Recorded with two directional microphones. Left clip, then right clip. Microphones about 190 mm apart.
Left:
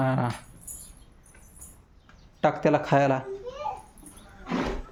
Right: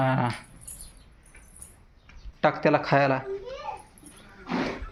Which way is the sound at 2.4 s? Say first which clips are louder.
Right 1 dB; 15° left (ahead or behind).